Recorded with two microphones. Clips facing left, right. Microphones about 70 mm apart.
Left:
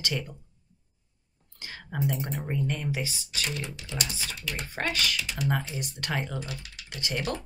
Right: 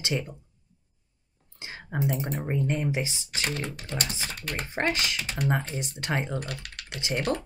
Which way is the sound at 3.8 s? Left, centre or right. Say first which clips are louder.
Right 2 dB; right.